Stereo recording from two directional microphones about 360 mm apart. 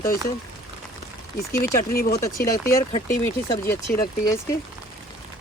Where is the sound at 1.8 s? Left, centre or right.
Left.